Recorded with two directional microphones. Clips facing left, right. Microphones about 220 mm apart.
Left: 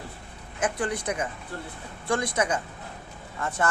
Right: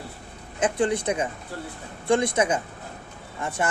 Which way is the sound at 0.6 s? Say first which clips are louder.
Right 5 dB; 25° right (ahead or behind).